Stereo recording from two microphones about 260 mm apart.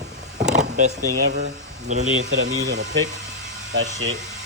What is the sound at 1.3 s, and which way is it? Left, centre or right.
Speech, right.